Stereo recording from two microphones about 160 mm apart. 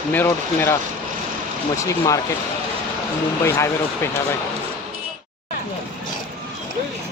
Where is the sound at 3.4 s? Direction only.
15° left (ahead or behind).